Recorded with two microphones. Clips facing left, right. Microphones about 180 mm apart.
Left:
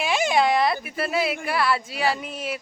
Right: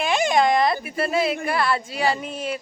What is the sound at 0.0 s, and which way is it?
A woman's voice, 5° left (ahead or behind).